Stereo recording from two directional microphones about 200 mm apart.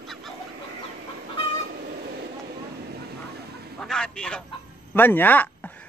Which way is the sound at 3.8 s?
5° left (ahead or behind).